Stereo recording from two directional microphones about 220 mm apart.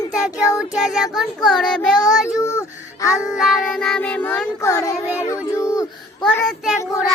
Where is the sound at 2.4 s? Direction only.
15° left (ahead or behind).